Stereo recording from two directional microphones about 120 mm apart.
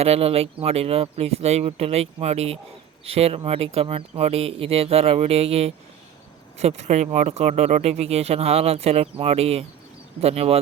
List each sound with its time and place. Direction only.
0.0 s speech: 60° right (ahead or behind)